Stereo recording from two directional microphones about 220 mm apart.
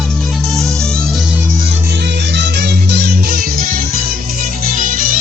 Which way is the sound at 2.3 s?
50° right (ahead or behind).